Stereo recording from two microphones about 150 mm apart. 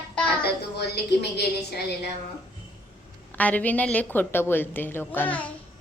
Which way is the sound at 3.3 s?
10° left (ahead or behind).